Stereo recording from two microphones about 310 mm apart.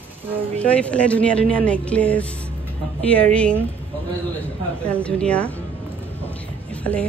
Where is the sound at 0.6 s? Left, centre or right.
Centre.